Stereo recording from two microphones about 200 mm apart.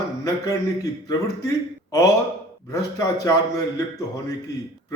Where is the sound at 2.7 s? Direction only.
15° left (ahead or behind).